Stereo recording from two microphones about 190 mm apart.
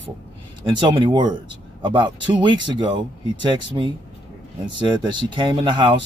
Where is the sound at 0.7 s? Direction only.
25° right (ahead or behind).